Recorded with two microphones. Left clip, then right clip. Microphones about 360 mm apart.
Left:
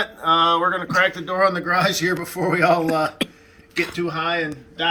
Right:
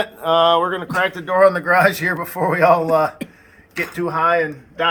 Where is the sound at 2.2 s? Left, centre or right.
Centre.